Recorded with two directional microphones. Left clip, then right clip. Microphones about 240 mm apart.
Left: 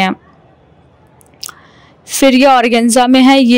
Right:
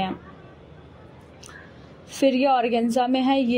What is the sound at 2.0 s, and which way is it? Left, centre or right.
A woman's voice, left.